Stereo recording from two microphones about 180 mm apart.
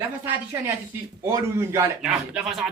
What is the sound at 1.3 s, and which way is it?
Speech, 15° right (ahead or behind).